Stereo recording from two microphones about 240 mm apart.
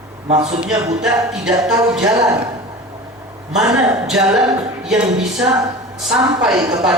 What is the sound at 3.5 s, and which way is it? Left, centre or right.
Speech, centre.